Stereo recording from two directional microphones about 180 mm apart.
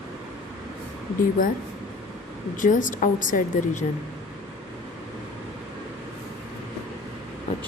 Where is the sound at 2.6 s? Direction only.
45° left (ahead or behind).